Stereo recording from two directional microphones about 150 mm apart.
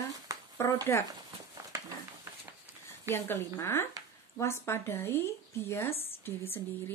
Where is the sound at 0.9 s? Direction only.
15° left (ahead or behind).